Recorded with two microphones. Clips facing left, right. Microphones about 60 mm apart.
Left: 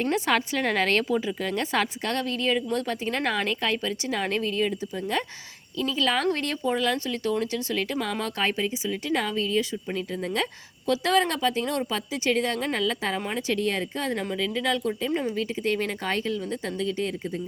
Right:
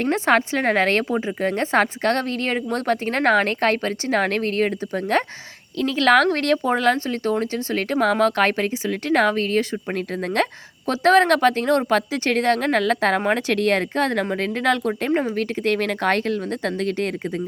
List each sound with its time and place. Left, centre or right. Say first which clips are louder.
0.0 s a woman's voice: right 6 dB; right
14.3 s speech: right 5 dB; right